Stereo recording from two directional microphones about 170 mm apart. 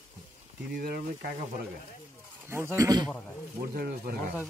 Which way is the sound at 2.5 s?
15° right (ahead or behind).